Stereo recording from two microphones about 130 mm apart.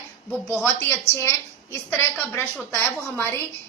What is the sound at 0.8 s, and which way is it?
A woman's voice, 20° left (ahead or behind).